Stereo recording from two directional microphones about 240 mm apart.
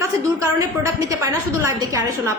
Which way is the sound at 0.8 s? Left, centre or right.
Centre.